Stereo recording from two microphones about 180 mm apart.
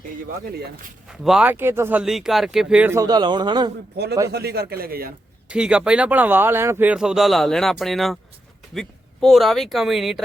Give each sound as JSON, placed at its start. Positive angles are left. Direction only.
{"t": 0.5, "sound": "a man's voice", "side_deg": -55}
{"t": 1.0, "sound": "speech", "side_deg": 0}
{"t": 4.3, "sound": "a man's voice", "side_deg": -65}
{"t": 5.5, "sound": "speech", "side_deg": -5}